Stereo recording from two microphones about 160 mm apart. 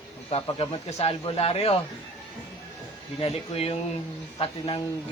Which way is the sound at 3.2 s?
40° left (ahead or behind).